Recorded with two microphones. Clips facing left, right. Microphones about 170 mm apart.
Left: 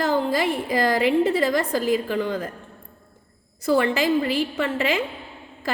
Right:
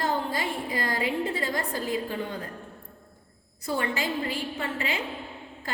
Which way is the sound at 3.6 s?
90° left.